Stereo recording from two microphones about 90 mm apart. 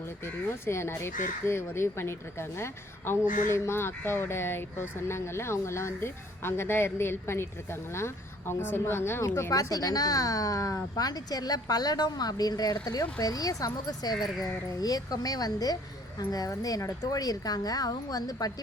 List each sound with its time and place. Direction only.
0.3 s speech: 30° left (ahead or behind); by 18.5 s 45° left (ahead or behind)